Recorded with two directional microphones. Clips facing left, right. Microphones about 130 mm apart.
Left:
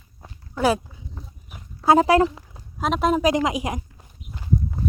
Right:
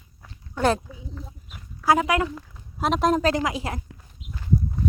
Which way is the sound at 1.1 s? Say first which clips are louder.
Right 2 dB; 25° left (ahead or behind).